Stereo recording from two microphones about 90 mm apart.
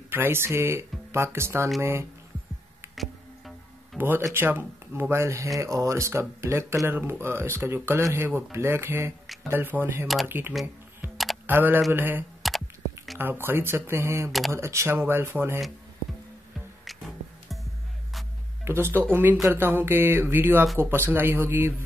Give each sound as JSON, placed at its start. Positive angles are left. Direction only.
{"t": 0.1, "sound": "speech", "side_deg": -25}
{"t": 3.0, "sound": "music", "side_deg": 0}
{"t": 4.0, "sound": "speech", "side_deg": -25}
{"t": 18.6, "sound": "speech", "side_deg": -25}